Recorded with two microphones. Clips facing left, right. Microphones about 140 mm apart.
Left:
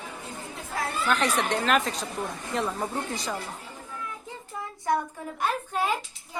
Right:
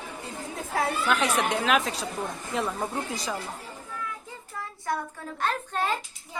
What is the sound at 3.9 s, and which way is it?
A child's voice, 20° left (ahead or behind).